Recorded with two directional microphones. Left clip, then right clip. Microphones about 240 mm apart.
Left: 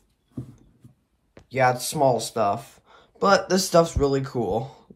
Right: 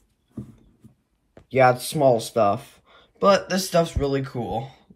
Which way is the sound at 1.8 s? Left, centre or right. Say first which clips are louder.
Right 2 dB; left.